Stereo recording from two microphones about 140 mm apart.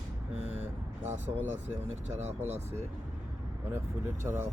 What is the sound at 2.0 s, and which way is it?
Speech, 50° right (ahead or behind).